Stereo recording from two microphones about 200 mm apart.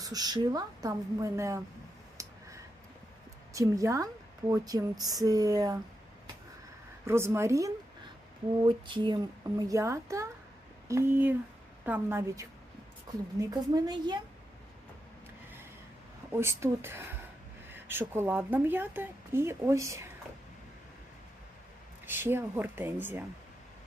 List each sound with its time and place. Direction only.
0.0 s a woman's voice: 20° right (ahead or behind)
2.2 s a sound: 15° right (ahead or behind)
3.5 s a woman's voice: 15° right (ahead or behind)
7.1 s a woman's voice: 10° right (ahead or behind)
16.3 s a woman's voice: 15° right (ahead or behind)
17.7 s a sound: 10° right (ahead or behind)
18.1 s a woman's voice: 10° right (ahead or behind)
22.0 s a woman's voice: 10° right (ahead or behind)